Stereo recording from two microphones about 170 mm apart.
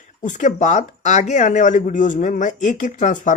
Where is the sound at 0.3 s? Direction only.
45° left (ahead or behind).